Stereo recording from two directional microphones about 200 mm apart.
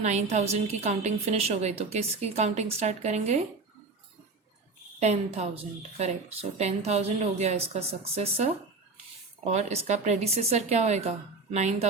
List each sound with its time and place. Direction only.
0.0 s a woman's voice: 35° right (ahead or behind)
4.9 s a woman's voice: 35° right (ahead or behind)